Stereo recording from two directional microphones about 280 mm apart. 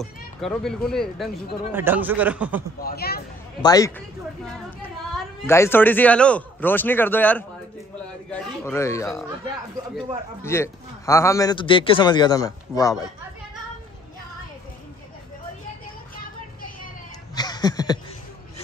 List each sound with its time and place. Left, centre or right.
0.0 s speech: centre
2.8 s speech: left
3.6 s a man's voice: centre
5.1 s a man's voice: centre
10.4 s a man's voice: centre
17.4 s chuckle: centre